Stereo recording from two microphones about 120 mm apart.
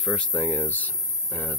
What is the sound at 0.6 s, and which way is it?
Speech, 15° left (ahead or behind).